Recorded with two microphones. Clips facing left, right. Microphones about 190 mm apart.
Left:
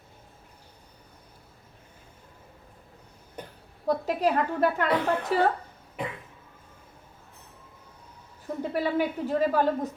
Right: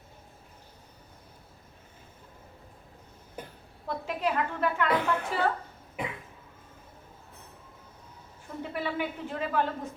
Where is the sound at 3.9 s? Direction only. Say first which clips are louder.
Left 6 dB; 40° left (ahead or behind).